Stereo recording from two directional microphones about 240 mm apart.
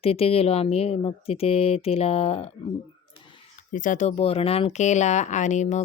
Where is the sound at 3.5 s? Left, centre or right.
Left.